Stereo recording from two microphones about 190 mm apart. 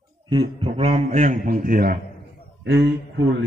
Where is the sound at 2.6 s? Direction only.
60° right (ahead or behind).